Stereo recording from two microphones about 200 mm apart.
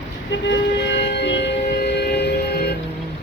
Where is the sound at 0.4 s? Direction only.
60° left (ahead or behind).